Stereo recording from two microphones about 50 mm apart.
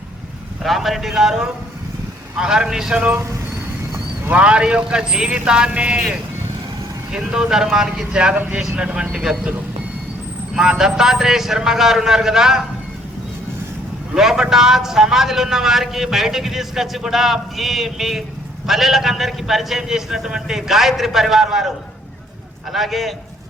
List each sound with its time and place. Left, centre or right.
0.6 s a man's voice: centre
4.3 s a man's voice: right
7.1 s a man's voice: centre
9.1 s speech: centre
10.5 s speech: centre
14.1 s a man's voice: centre
22.7 s a man's voice: centre